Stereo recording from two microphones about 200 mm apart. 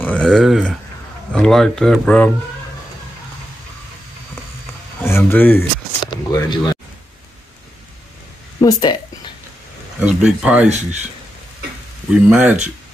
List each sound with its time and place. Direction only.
0.0 s speech: 5° left (ahead or behind)
5.0 s speech: 10° left (ahead or behind)
6.0 s speech: 20° left (ahead or behind)
8.5 s speech: 20° left (ahead or behind)
9.9 s speech: 5° right (ahead or behind)
12.1 s speech: 5° right (ahead or behind)